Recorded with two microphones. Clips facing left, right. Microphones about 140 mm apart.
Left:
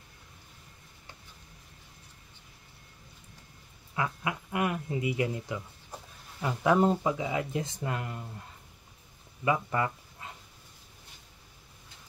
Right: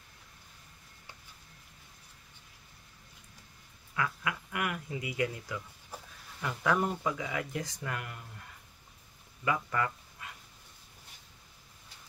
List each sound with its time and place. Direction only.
3.9 s speech: 25° left (ahead or behind)